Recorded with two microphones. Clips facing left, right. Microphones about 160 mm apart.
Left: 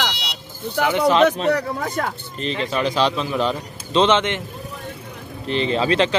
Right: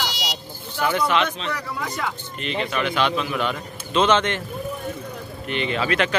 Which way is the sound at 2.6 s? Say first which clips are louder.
Left 3 dB; 35° left (ahead or behind).